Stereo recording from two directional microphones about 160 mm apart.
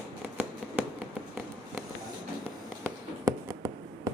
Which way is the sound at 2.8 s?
20° right (ahead or behind).